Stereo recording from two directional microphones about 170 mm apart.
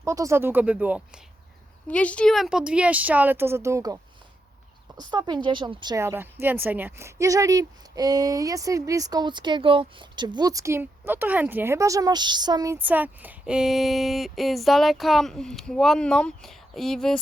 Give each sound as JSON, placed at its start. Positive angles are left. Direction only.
{"t": 0.0, "sound": "speech", "side_deg": -15}
{"t": 1.9, "sound": "a woman's voice", "side_deg": 5}